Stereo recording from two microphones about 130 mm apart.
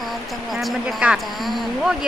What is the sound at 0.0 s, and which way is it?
Speech, centre (ahead or behind).